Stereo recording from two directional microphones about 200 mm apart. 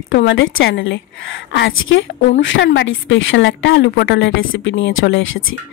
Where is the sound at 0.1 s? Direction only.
60° left (ahead or behind).